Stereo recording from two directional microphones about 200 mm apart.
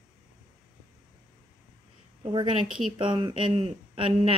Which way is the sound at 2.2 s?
25° right (ahead or behind).